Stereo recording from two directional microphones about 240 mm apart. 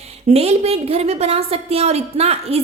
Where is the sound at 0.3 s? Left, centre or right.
Right.